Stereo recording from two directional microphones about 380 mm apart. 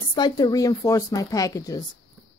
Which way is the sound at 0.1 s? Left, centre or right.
Centre.